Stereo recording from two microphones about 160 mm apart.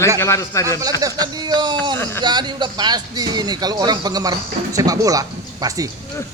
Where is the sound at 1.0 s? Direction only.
25° right (ahead or behind).